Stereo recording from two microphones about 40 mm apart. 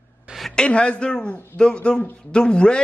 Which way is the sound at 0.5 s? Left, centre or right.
Left.